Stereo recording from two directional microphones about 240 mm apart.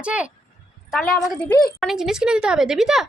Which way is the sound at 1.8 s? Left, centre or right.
Centre.